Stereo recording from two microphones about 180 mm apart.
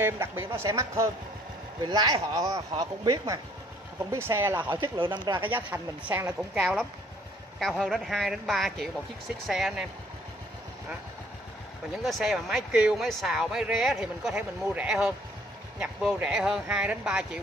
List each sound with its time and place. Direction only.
0.0 s speech: 15° right (ahead or behind)
4.8 s speech: 25° right (ahead or behind)
5.5 s speech: 10° right (ahead or behind)
12.0 s speech: centre (ahead or behind)